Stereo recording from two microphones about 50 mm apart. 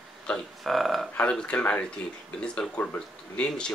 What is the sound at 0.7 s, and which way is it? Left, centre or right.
Speech, centre.